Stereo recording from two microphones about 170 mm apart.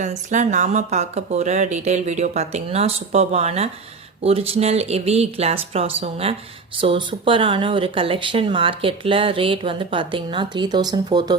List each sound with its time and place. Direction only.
0.0 s speech: 45° right (ahead or behind); by 11.3 s 25° right (ahead or behind)